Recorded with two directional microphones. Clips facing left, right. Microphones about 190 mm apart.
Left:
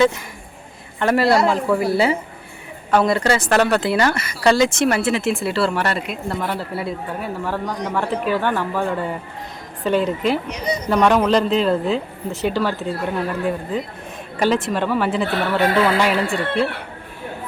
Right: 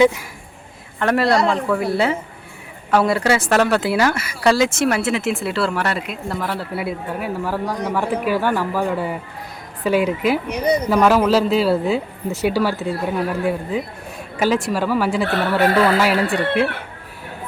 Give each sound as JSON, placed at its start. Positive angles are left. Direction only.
{"t": 0.0, "sound": "speech", "side_deg": -10}
{"t": 0.9, "sound": "speech", "side_deg": 0}